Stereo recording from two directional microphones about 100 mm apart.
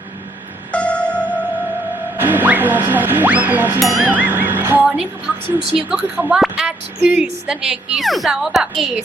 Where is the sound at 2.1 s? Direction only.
20° right (ahead or behind).